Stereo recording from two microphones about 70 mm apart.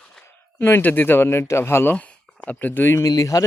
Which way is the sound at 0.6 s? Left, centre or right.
Left.